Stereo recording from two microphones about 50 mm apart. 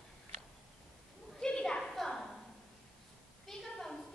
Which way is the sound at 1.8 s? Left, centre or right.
Centre.